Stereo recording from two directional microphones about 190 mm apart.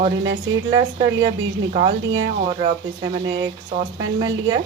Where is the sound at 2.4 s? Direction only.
30° right (ahead or behind).